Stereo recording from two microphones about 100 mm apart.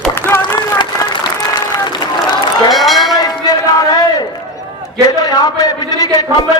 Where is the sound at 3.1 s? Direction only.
40° left (ahead or behind).